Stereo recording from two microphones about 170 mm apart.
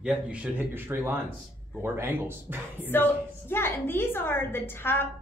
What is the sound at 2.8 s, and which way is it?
A woman's voice, 10° left (ahead or behind).